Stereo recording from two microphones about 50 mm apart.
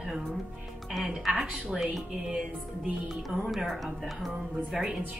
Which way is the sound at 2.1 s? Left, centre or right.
Centre.